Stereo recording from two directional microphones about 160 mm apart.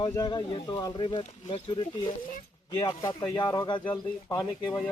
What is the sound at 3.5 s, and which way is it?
Speech, 30° left (ahead or behind).